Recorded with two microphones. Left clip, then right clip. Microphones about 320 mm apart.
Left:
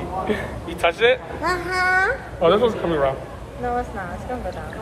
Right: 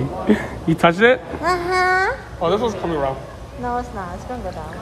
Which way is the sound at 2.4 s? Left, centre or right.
Right.